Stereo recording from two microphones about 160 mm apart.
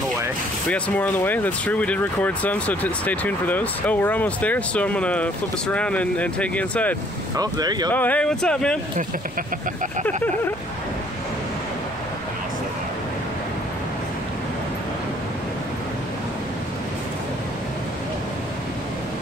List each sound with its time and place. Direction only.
0.7 s speech: 10° left (ahead or behind)
7.3 s speech: 25° right (ahead or behind)
7.9 s speech: 10° left (ahead or behind)